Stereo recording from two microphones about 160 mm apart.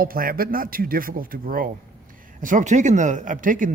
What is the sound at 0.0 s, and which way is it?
Speech, 65° right (ahead or behind).